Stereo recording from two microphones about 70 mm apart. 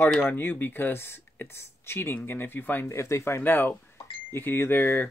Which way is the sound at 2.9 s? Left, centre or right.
Left.